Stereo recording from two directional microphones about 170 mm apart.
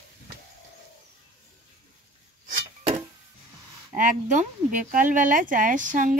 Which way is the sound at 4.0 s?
50° right (ahead or behind).